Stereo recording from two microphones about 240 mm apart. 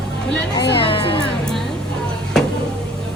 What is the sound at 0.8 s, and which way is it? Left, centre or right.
Speech, left.